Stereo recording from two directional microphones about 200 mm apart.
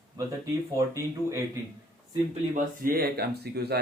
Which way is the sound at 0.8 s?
15° right (ahead or behind).